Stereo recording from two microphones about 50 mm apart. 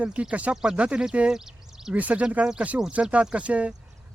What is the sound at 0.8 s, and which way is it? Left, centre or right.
Speech, right.